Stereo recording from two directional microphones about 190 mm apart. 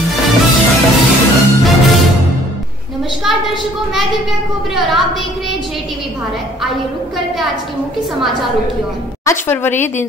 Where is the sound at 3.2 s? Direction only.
Centre (ahead or behind).